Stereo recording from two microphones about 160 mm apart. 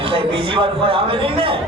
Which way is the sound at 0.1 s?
35° right (ahead or behind).